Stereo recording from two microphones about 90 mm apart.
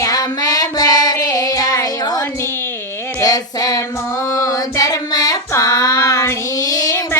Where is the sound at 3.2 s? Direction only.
40° left (ahead or behind).